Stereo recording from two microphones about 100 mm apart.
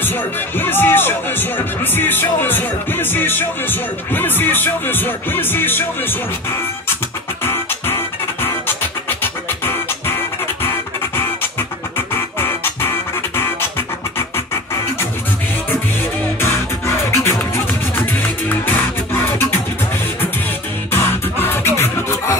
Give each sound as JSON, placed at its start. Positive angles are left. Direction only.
{"t": 0.0, "sound": "music", "side_deg": 20}
{"t": 7.4, "sound": "music", "side_deg": 25}
{"t": 12.1, "sound": "music", "side_deg": 25}
{"t": 16.3, "sound": "music", "side_deg": 25}
{"t": 20.9, "sound": "music", "side_deg": 20}